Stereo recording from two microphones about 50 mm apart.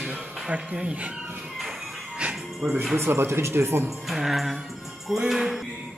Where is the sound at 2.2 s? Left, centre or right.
Centre.